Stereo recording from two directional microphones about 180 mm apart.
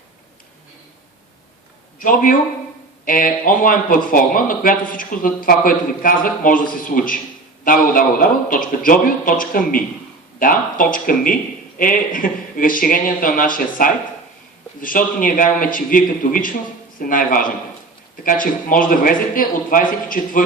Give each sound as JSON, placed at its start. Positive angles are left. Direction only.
{"t": 2.0, "sound": "a man's voice", "side_deg": 50}